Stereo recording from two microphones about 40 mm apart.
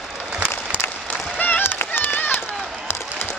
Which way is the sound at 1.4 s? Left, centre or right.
Left.